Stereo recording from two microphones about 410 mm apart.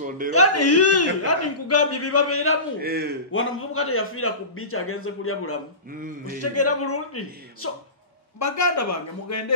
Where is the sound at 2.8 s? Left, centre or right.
Right.